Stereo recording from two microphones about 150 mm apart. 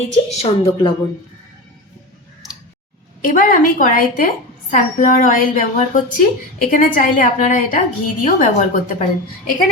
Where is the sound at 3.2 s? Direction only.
65° left (ahead or behind).